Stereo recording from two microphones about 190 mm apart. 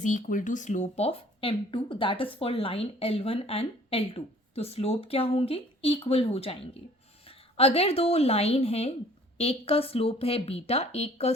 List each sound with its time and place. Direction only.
0.0 s a woman's voice: 40° left (ahead or behind)